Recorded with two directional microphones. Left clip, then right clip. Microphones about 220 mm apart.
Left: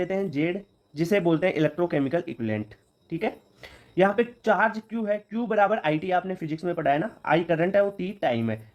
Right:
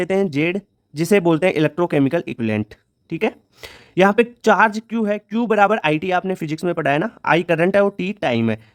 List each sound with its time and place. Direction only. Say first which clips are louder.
0.0 s speech: right 8 dB; 40° right (ahead or behind)